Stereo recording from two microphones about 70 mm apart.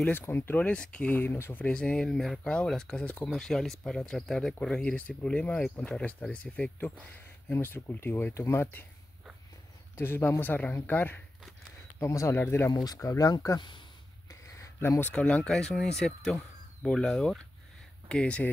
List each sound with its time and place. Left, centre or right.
0.2 s speech: left
0.7 s speech: centre
1.2 s speech: left
1.7 s speech: centre
7.4 s speech: left
9.9 s speech: left
12.0 s speech: left
12.4 s speech: left
12.7 s speech: left
14.8 s speech: left
15.1 s speech: centre